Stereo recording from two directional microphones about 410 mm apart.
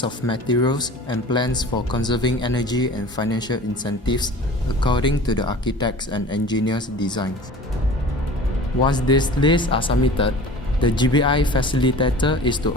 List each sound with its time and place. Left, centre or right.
0.0 s speech: centre
8.9 s speech: centre